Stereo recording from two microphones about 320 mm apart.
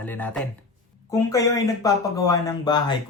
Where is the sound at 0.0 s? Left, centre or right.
Centre.